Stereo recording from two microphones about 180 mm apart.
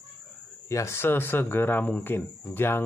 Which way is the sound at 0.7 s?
15° left (ahead or behind).